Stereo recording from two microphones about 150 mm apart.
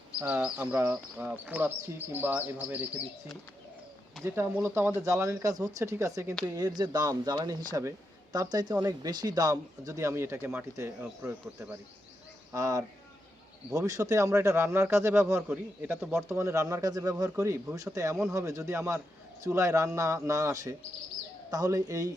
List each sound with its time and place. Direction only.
0.2 s a man's voice: 10° right (ahead or behind)
4.5 s a man's voice: 15° right (ahead or behind)
12.5 s a man's voice: 25° right (ahead or behind); by 16.1 s 5° right (ahead or behind)
16.1 s a man's voice: 20° right (ahead or behind)